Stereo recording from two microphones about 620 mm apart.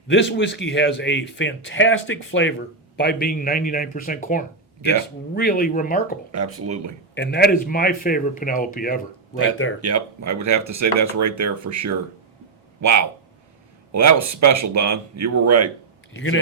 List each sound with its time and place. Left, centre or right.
0.1 s a man's voice: centre
6.3 s speech: right
7.1 s a man's voice: centre
9.8 s speech: right
16.1 s speech: centre